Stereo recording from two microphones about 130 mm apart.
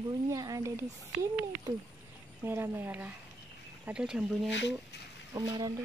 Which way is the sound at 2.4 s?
15° right (ahead or behind).